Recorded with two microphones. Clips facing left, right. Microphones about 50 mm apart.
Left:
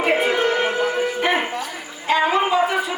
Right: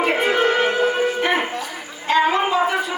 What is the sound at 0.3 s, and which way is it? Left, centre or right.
Music, right.